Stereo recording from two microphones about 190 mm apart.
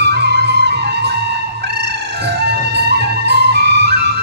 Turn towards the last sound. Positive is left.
turn(degrees=-60)  # may be behind; listen again after turning